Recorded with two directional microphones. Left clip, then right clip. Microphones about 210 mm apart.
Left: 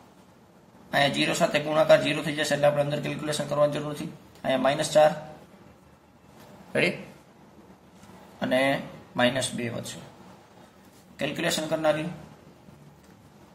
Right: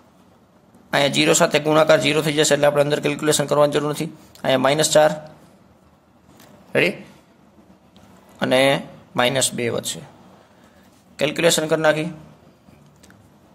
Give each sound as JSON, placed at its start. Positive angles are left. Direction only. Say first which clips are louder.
{"t": 0.8, "sound": "a man's voice", "louder": "right 7 dB", "side_deg": -45}
{"t": 6.7, "sound": "a man's voice", "louder": "right 6 dB", "side_deg": -35}
{"t": 8.4, "sound": "speech", "louder": "right 8 dB", "side_deg": -45}
{"t": 11.1, "sound": "a man's voice", "louder": "right 10 dB", "side_deg": -45}